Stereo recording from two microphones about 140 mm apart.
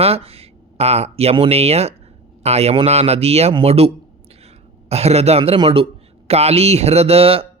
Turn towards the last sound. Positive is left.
turn(degrees=-45)  # may be behind; listen again after turning